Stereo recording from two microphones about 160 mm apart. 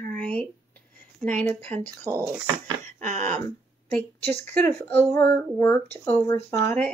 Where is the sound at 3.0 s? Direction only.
50° right (ahead or behind).